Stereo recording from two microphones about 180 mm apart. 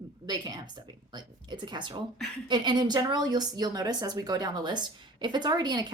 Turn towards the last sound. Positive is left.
turn(degrees=-25)  # may be behind; listen again after turning